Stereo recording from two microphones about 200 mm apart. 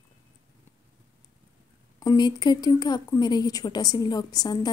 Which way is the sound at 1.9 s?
20° left (ahead or behind).